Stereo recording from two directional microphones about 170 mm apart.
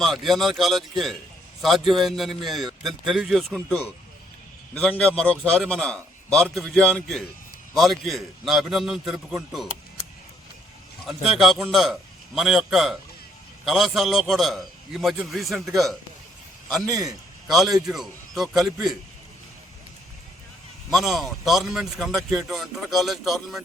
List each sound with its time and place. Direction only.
0.0 s speech: centre (ahead or behind)
11.0 s speech: centre (ahead or behind)
16.8 s a man's voice: 20° right (ahead or behind)
17.5 s speech: centre (ahead or behind)
20.9 s speech: centre (ahead or behind)